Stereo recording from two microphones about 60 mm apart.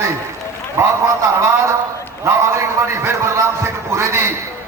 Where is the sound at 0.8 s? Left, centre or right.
Right.